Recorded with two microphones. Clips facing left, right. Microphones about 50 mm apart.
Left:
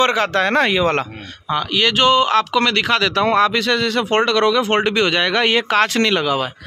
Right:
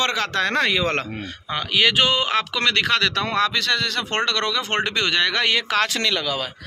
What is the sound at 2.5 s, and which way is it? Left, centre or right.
Speech, centre.